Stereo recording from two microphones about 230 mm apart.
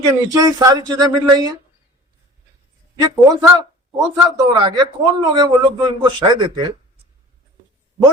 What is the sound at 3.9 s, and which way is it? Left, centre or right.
Speech, centre.